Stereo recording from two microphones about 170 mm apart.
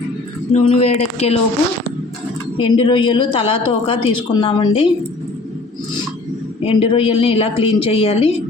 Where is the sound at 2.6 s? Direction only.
30° left (ahead or behind).